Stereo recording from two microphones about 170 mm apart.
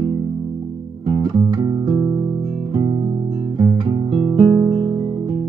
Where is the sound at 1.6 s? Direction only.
25° right (ahead or behind).